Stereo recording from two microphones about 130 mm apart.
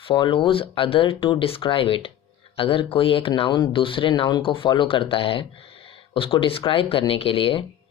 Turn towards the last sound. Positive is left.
turn(degrees=45)  # may be behind; listen again after turning